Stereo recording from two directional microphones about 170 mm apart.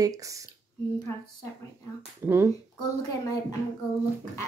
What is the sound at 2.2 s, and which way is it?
Speech, 15° right (ahead or behind).